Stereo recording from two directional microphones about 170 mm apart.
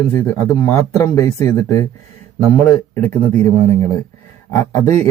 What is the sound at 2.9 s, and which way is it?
Speech, 10° left (ahead or behind).